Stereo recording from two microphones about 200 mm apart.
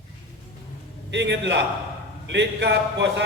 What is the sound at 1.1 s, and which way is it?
A man's voice, 60° right (ahead or behind).